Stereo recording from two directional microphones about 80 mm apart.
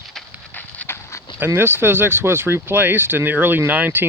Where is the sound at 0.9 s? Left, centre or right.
Left.